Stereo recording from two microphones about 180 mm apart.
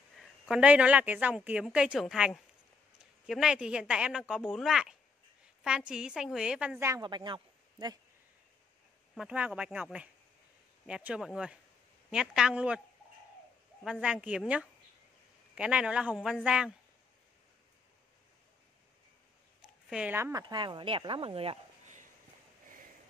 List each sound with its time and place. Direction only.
0.2 s a woman's voice: 5° right (ahead or behind)
6.9 s speech: 25° right (ahead or behind)
9.1 s a woman's voice: 5° right (ahead or behind)
13.8 s a woman's voice: 5° right (ahead or behind)
19.9 s speech: 10° right (ahead or behind)
20.4 s speech: 25° right (ahead or behind)